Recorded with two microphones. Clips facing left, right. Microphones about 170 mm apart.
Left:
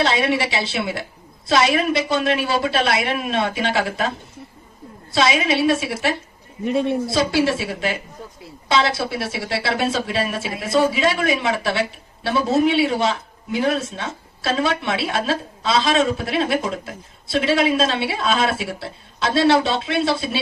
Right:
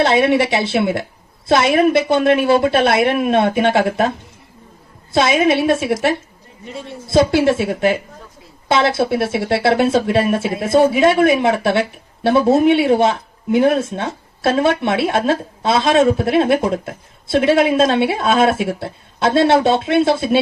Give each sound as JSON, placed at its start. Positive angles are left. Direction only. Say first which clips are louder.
{"t": 0.0, "sound": "a woman's voice", "louder": "right 6 dB", "side_deg": -55}
{"t": 5.1, "sound": "a woman's voice", "louder": "right 5 dB", "side_deg": -55}
{"t": 6.7, "sound": "a man's voice", "louder": "left 11 dB", "side_deg": 65}
{"t": 7.1, "sound": "a woman's voice", "louder": "right 11 dB", "side_deg": -55}